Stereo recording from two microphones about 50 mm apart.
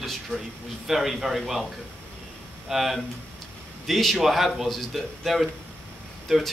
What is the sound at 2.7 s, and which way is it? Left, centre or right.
A man's voice, centre.